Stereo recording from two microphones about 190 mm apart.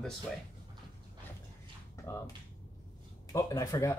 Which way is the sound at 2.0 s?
15° left (ahead or behind).